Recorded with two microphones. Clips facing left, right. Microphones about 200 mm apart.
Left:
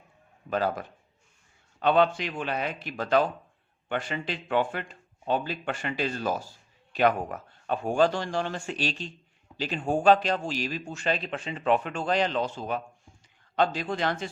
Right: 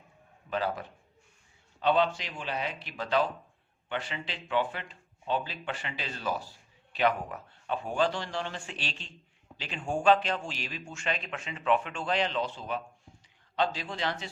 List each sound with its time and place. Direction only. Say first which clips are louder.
0.5 s speech: left 4 dB; 45° left (ahead or behind)